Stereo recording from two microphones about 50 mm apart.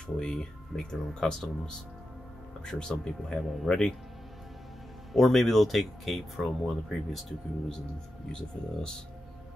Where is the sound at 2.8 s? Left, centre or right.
Centre.